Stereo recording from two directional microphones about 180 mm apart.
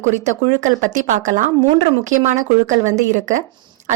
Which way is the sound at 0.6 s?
45° right (ahead or behind).